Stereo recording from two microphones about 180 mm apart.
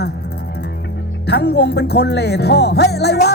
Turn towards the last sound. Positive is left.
turn(degrees=65)  # may be behind; listen again after turning